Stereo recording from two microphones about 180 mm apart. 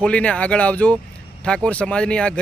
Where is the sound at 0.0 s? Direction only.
5° left (ahead or behind).